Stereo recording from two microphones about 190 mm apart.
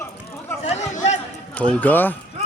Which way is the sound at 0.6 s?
35° left (ahead or behind).